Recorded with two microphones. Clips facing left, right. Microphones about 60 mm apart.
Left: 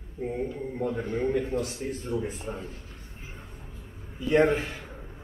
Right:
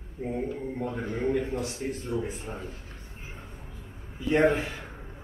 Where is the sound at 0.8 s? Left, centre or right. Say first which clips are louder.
Left 5 dB; right.